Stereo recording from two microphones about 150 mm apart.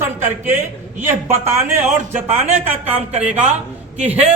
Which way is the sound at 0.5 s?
50° right (ahead or behind).